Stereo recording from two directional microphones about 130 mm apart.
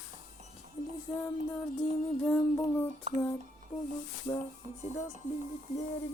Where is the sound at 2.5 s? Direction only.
15° left (ahead or behind).